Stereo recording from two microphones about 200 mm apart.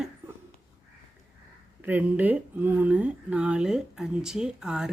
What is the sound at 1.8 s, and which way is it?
Speech, 10° right (ahead or behind).